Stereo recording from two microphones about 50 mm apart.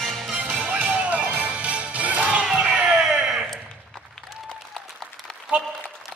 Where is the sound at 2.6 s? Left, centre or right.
Centre.